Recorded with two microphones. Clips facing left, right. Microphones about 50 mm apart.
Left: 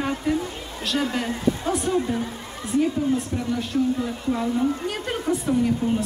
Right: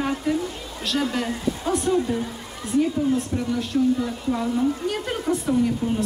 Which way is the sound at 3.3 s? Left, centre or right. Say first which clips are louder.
Right 1 dB; centre.